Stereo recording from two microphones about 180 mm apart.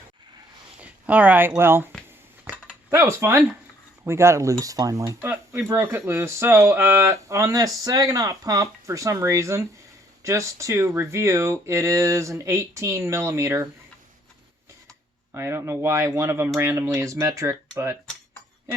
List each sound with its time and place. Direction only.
0.8 s speech: 10° right (ahead or behind)
2.4 s cutlery: 10° right (ahead or behind)
4.0 s speech: 15° right (ahead or behind)
15.3 s speech: 15° right (ahead or behind)